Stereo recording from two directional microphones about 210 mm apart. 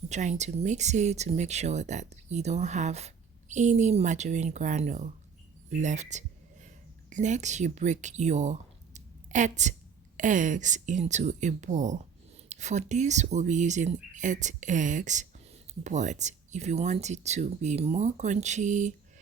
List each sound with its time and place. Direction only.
0.1 s speech: 35° right (ahead or behind)
5.8 s a sound: 35° right (ahead or behind)
7.1 s speech: 35° right (ahead or behind)